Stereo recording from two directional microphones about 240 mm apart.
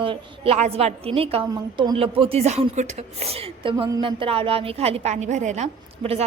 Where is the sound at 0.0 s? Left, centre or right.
Right.